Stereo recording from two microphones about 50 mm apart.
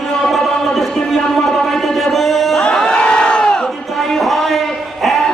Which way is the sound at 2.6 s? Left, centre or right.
Centre.